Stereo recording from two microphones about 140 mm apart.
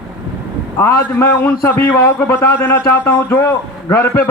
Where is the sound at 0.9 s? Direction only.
20° left (ahead or behind).